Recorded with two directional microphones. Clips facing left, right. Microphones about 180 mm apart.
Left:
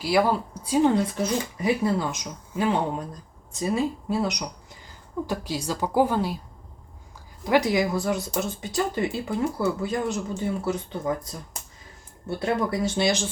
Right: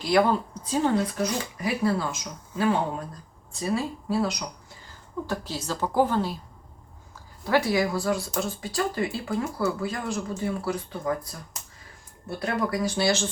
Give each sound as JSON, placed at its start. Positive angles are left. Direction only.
{"t": 0.0, "sound": "speech", "side_deg": 5}
{"t": 7.4, "sound": "speech", "side_deg": 15}
{"t": 12.4, "sound": "speech", "side_deg": 25}